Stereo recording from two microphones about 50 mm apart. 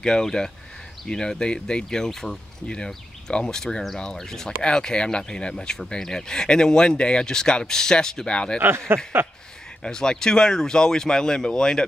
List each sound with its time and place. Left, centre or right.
0.0 s speech: centre
8.5 s speech: right
9.8 s speech: centre